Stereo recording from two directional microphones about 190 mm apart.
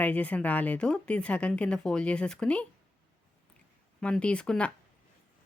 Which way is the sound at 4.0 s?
5° left (ahead or behind).